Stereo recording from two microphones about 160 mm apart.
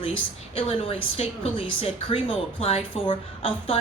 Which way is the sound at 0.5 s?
35° left (ahead or behind).